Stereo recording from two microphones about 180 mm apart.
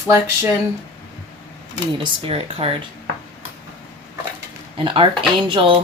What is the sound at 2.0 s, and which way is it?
Speech, 30° right (ahead or behind).